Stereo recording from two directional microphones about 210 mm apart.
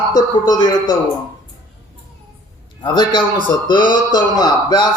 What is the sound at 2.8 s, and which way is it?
A man's voice, 20° left (ahead or behind).